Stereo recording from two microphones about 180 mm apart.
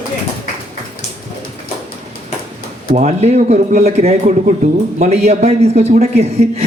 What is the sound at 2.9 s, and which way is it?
A man's voice, 40° right (ahead or behind).